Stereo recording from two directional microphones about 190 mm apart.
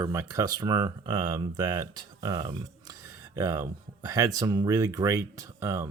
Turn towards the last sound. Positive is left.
turn(degrees=-15)  # may be behind; listen again after turning